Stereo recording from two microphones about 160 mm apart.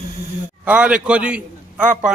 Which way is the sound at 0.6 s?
10° right (ahead or behind).